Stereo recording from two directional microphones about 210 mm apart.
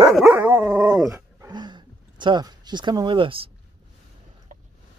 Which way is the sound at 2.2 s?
20° right (ahead or behind).